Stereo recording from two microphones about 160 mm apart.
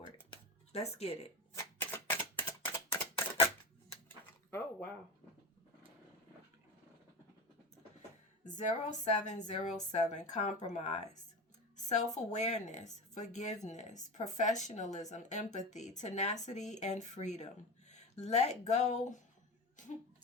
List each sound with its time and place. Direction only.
0.7 s speech: 40° left (ahead or behind)
1.5 s typewriter: 15° left (ahead or behind)
8.4 s speech: 50° left (ahead or behind)